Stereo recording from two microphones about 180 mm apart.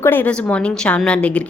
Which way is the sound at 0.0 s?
10° left (ahead or behind).